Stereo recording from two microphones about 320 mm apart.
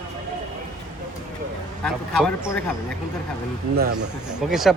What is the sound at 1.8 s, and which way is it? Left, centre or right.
Speech, centre.